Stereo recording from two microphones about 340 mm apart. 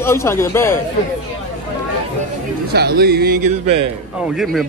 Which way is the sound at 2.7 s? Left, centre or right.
Right.